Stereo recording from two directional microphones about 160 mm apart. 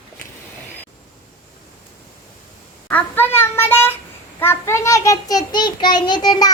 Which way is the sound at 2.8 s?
10° left (ahead or behind).